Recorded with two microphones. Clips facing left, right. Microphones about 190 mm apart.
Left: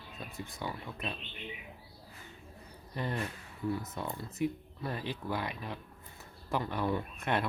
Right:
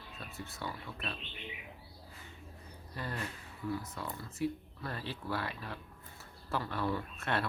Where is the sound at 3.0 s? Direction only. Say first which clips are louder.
Left 5 dB; 20° left (ahead or behind).